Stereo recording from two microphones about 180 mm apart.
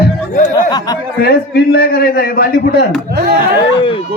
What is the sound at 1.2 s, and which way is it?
A man's voice, 60° left (ahead or behind).